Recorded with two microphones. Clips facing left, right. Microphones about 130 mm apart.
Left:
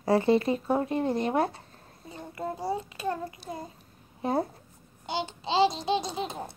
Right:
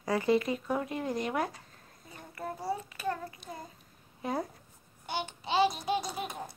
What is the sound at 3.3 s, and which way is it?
A child's voice, 30° left (ahead or behind).